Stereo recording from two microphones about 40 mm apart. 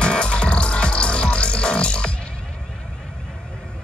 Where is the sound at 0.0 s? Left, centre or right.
Left.